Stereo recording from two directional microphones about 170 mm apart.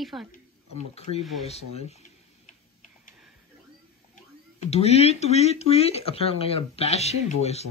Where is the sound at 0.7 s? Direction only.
35° left (ahead or behind).